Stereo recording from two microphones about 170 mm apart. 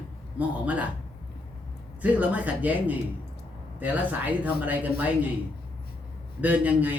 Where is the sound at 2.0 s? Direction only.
10° right (ahead or behind).